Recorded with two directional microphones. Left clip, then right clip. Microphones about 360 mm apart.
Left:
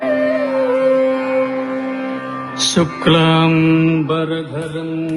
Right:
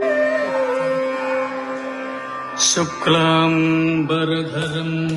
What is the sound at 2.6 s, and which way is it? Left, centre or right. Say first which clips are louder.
Mantra: left 2 dB; left.